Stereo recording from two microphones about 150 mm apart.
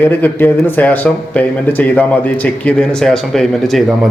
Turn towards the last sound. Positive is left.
turn(degrees=0)  # may be behind; listen again after turning